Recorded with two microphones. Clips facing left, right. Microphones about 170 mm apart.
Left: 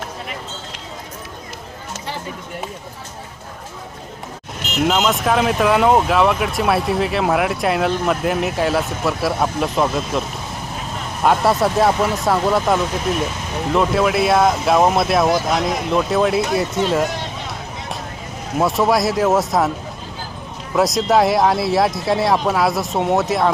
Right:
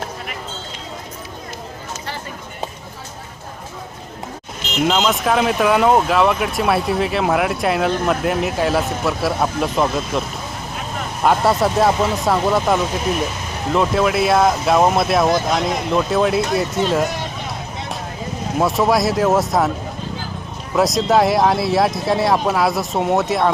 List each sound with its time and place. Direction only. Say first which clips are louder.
4.8 s speech: even; centre (ahead or behind)
18.6 s speech: even; centre (ahead or behind)
20.7 s speech: even; centre (ahead or behind)